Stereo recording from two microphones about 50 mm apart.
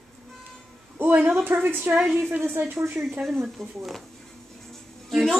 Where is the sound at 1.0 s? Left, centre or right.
Right.